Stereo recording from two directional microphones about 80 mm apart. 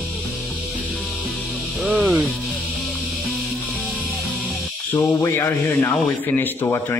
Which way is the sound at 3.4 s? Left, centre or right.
Centre.